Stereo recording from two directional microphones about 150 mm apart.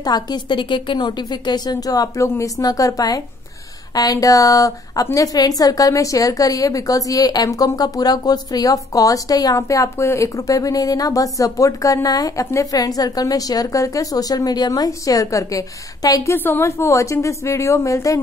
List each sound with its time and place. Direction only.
0.0 s a woman's voice: 25° left (ahead or behind)